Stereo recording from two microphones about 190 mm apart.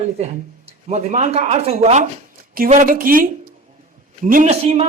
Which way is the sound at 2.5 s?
45° right (ahead or behind).